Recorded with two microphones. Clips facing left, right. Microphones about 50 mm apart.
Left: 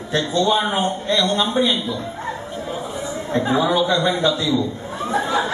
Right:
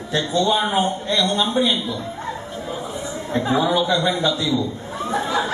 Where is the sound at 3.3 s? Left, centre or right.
Left.